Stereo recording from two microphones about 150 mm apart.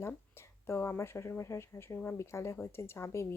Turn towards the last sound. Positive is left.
turn(degrees=20)  # may be behind; listen again after turning